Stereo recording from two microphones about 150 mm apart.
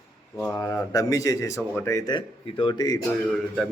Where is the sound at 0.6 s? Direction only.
20° left (ahead or behind).